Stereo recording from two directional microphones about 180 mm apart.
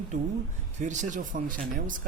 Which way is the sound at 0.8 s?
40° right (ahead or behind).